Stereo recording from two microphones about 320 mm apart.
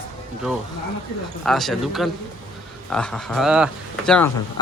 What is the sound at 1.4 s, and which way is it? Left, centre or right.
Speech, centre.